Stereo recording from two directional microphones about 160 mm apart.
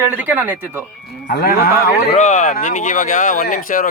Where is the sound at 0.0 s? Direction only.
10° right (ahead or behind).